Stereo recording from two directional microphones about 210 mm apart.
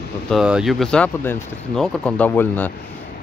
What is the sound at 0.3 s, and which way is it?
Speech, 5° right (ahead or behind).